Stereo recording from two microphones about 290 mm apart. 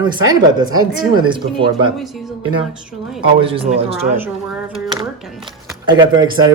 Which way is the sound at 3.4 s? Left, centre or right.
Centre.